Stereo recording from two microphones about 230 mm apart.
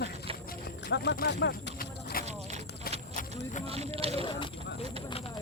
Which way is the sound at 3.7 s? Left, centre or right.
Right.